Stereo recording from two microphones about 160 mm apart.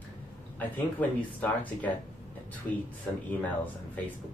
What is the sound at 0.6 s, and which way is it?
A man's voice, 10° left (ahead or behind).